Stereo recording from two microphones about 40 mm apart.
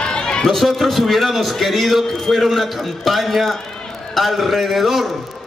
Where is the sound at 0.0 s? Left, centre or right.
Left.